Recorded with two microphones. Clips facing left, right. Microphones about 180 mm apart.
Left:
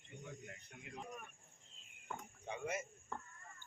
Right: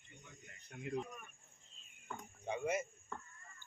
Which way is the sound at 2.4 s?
20° right (ahead or behind).